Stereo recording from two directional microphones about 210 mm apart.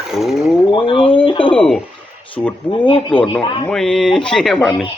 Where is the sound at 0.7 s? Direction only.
25° left (ahead or behind).